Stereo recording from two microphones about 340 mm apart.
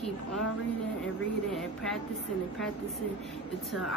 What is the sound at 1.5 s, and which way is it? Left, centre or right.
Speech, centre.